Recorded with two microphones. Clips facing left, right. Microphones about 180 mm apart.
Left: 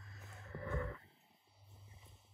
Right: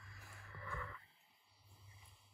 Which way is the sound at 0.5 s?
40° left (ahead or behind).